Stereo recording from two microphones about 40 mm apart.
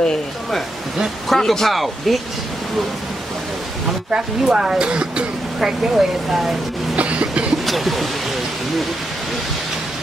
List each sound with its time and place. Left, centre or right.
1.3 s speech: centre
4.1 s speech: centre
5.6 s speech: centre
7.0 s cough: right
7.6 s speech: centre